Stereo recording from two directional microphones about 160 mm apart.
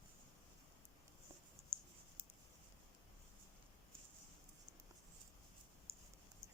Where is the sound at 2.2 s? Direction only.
35° right (ahead or behind).